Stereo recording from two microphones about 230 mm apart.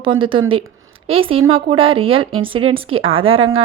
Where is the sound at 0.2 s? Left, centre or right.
Right.